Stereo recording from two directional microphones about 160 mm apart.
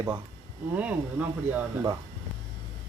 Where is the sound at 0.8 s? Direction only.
10° right (ahead or behind).